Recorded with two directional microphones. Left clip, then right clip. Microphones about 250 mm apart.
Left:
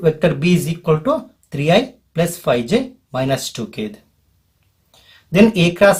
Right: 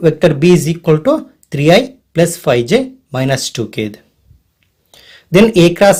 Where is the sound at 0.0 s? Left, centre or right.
Right.